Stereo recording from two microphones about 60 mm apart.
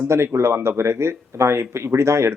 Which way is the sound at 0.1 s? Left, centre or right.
Right.